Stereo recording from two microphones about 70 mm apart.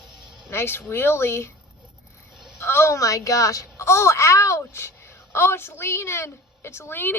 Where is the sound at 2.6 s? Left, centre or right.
Left.